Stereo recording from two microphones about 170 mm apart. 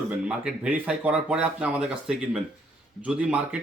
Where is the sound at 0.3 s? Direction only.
5° right (ahead or behind).